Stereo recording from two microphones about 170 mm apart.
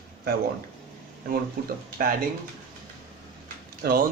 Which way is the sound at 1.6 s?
55° right (ahead or behind).